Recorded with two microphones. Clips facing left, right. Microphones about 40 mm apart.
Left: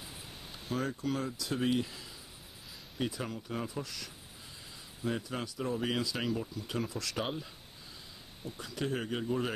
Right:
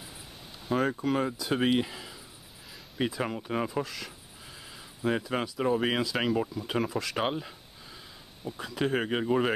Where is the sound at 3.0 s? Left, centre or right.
Right.